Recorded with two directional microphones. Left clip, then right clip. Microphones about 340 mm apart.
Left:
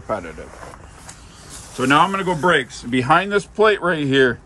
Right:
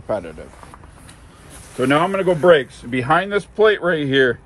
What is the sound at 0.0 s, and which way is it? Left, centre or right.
Speech, centre.